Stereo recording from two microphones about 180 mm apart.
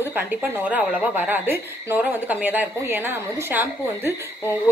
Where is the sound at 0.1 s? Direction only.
10° right (ahead or behind).